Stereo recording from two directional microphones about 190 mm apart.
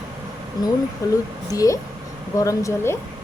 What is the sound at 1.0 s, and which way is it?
Speech, 15° left (ahead or behind).